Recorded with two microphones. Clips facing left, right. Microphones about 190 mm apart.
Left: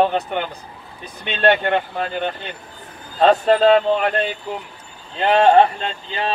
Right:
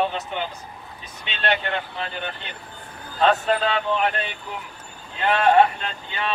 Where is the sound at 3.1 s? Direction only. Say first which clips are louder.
Left 6 dB; 35° left (ahead or behind).